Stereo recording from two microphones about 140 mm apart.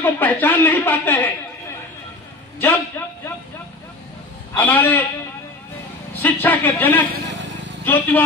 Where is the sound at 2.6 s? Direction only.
15° left (ahead or behind).